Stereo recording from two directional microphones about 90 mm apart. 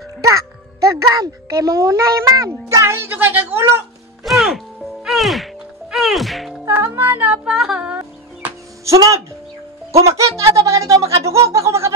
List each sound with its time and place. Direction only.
0.2 s a child's voice: 40° right (ahead or behind)
4.2 s music: centre (ahead or behind)
6.8 s music: 30° right (ahead or behind)
7.4 s a sound: 5° right (ahead or behind)
8.8 s speech: 35° right (ahead or behind)
11.4 s a sound: 35° right (ahead or behind)